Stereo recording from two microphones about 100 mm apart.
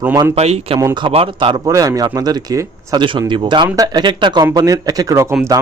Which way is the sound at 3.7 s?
40° right (ahead or behind).